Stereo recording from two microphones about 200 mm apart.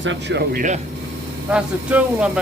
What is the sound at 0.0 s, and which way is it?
Speech, 65° right (ahead or behind).